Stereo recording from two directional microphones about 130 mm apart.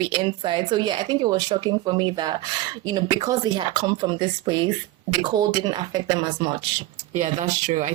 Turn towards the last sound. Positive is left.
turn(degrees=-65)  # may be behind; listen again after turning